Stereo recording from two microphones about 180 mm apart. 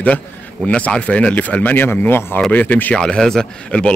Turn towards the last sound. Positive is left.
turn(degrees=5)  # may be behind; listen again after turning